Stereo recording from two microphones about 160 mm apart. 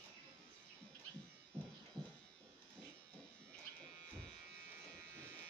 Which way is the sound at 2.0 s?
5° left (ahead or behind).